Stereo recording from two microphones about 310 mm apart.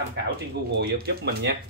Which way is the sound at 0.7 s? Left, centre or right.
Right.